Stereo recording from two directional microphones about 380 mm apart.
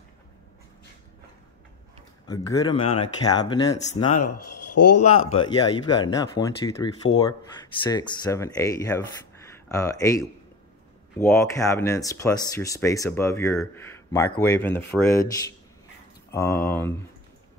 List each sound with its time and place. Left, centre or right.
2.2 s speech: centre
4.1 s speech: left
5.3 s speech: centre